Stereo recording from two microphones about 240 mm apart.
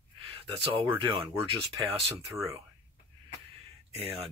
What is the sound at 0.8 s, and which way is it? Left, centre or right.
Speech, centre.